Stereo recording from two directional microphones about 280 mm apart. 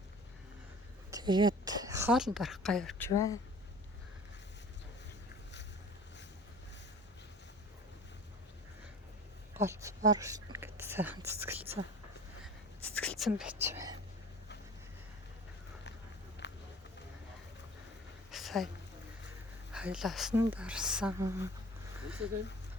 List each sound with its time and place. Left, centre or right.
1.1 s a woman's voice: centre
3.1 s speech: centre
9.6 s speech: centre
12.4 s whispering: centre
16.4 s run: left
18.3 s a sound: centre
19.7 s a woman's voice: centre